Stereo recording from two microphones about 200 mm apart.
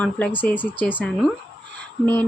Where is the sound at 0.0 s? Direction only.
5° left (ahead or behind).